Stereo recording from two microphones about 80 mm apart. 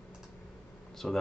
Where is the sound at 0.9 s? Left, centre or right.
Centre.